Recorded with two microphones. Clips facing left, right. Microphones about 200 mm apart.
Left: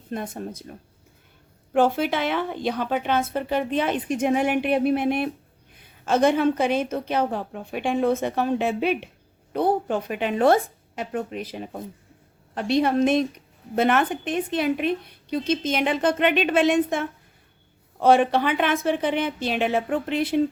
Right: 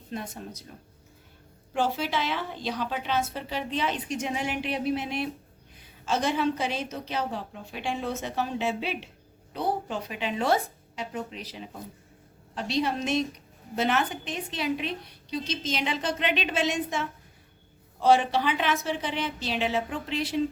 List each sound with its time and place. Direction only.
0.1 s speech: 50° left (ahead or behind)
1.7 s a woman's voice: 55° left (ahead or behind)